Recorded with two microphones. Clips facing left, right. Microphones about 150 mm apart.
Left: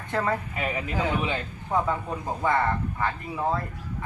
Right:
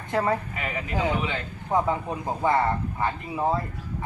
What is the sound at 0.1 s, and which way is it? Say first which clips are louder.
Speech: right 2 dB; 15° right (ahead or behind).